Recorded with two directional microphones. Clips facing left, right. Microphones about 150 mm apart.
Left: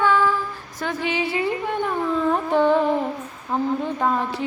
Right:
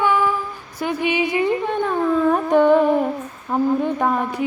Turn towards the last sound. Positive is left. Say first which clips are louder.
# right 2 dB
turn(degrees=-15)  # may be behind; listen again after turning